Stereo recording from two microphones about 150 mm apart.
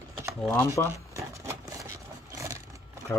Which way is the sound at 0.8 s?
15° left (ahead or behind).